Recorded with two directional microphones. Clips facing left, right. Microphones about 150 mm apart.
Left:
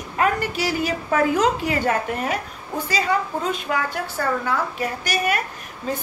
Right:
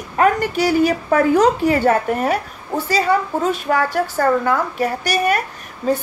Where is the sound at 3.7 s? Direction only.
45° right (ahead or behind).